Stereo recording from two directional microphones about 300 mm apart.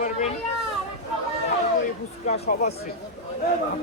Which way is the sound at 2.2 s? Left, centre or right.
Left.